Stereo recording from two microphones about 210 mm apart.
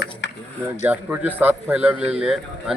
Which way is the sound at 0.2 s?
60° left (ahead or behind).